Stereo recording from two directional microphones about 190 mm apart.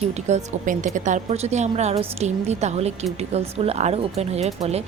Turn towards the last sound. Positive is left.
turn(degrees=-35)  # may be behind; listen again after turning